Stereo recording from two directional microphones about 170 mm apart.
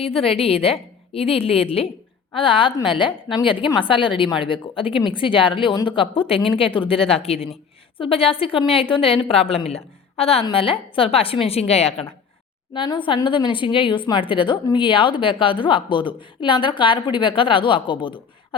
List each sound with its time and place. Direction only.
0.0 s a woman's voice: 35° left (ahead or behind)